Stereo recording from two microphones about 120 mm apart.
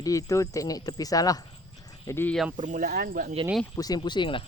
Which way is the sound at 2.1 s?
20° left (ahead or behind).